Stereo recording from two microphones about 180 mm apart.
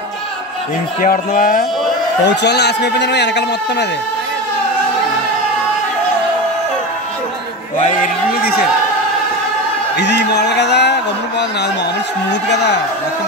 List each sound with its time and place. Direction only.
1.0 s speech: 50° left (ahead or behind)
2.2 s a man's voice: 70° left (ahead or behind)
8.0 s a sound: 60° left (ahead or behind)
9.9 s a man's voice: 70° left (ahead or behind)